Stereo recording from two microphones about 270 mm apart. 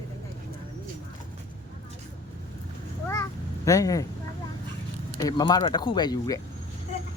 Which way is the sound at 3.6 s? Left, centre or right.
Centre.